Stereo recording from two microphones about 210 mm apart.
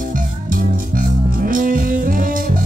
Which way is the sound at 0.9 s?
40° right (ahead or behind).